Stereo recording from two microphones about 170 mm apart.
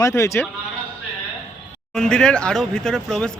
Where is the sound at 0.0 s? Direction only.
15° left (ahead or behind).